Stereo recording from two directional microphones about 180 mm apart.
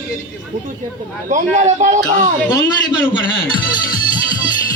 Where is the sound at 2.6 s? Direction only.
25° left (ahead or behind).